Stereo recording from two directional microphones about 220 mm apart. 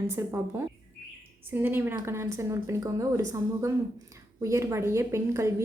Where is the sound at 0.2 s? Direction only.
10° right (ahead or behind).